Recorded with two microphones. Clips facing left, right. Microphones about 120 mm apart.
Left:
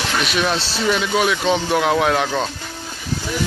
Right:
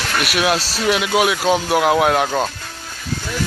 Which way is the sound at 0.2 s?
5° right (ahead or behind).